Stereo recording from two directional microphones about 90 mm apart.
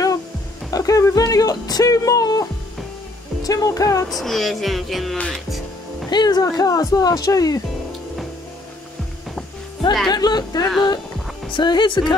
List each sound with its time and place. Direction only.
0.7 s speech: 40° left (ahead or behind)
3.4 s music: 40° left (ahead or behind)
4.1 s speech: centre (ahead or behind)
5.1 s speech: 10° left (ahead or behind)
6.0 s speech: 50° left (ahead or behind)
10.0 s speech: 50° left (ahead or behind)
11.5 s speech: 55° left (ahead or behind)